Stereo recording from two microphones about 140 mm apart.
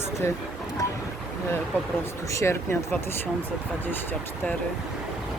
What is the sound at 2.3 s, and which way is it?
Speech, 20° left (ahead or behind).